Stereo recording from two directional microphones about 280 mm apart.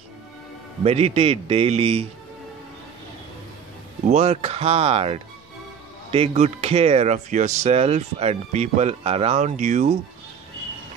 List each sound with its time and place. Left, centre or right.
0.8 s speech: right
4.1 s speech: right